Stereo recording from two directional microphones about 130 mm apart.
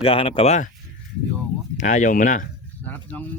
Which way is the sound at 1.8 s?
70° left (ahead or behind).